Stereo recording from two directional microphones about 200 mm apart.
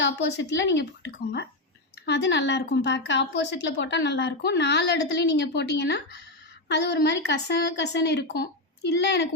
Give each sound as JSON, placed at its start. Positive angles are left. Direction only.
{"t": 0.0, "sound": "a woman's voice", "side_deg": 60}